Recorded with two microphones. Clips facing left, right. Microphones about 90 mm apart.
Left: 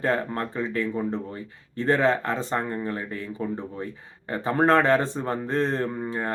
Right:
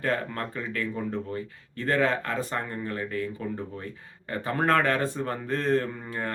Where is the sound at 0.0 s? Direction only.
25° left (ahead or behind).